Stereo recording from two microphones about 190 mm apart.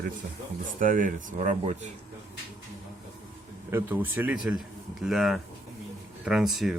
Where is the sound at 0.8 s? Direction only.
45° right (ahead or behind).